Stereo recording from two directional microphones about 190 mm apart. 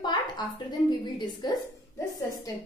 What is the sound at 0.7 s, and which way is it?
Speech, 20° left (ahead or behind).